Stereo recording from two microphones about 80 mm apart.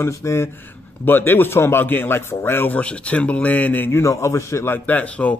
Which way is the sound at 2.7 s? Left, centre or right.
Centre.